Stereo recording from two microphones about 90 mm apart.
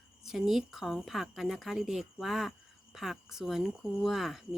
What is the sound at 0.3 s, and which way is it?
Speech, 5° right (ahead or behind).